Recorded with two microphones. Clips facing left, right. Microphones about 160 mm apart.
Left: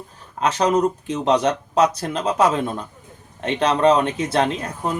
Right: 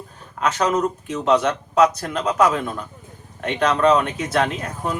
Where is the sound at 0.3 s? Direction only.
30° left (ahead or behind).